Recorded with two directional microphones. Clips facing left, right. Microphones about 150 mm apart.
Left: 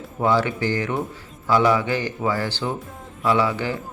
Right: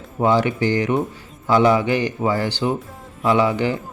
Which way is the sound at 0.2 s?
20° right (ahead or behind).